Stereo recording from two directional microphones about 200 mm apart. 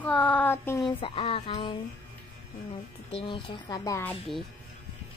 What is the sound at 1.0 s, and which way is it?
Speech, 25° left (ahead or behind).